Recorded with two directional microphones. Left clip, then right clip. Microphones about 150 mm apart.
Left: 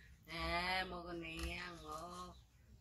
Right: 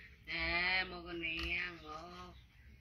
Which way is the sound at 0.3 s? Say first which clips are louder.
Right 5 dB; 35° left (ahead or behind).